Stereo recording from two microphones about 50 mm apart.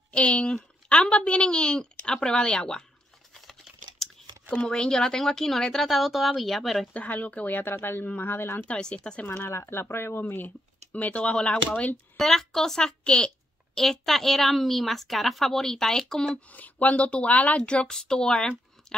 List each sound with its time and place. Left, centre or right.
0.1 s a woman's voice: left
4.0 s a sound: centre
4.5 s a woman's voice: left; by 6.9 s centre
6.9 s speech: left
8.6 s a woman's voice: left
9.5 s speech: left
12.2 s a woman's voice: centre
13.7 s speech: centre
16.3 s a woman's voice: left; by 18.5 s centre
18.9 s chewing: centre